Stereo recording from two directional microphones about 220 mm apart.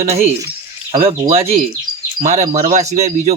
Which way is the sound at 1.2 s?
25° right (ahead or behind).